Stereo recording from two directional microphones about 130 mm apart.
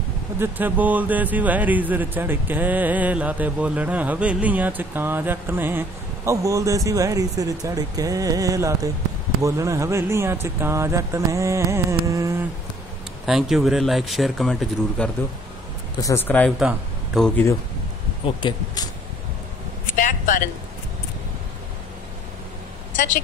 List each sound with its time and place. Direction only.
0.4 s speech: 15° right (ahead or behind)
13.2 s speech: 5° right (ahead or behind)
16.0 s speech: 20° left (ahead or behind)
16.4 s speech: centre (ahead or behind)
18.2 s speech: 40° left (ahead or behind)
20.0 s a sound: 90° left